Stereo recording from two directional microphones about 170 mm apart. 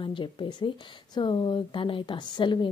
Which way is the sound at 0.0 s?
30° left (ahead or behind).